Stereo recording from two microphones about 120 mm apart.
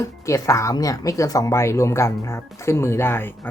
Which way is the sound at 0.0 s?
25° left (ahead or behind).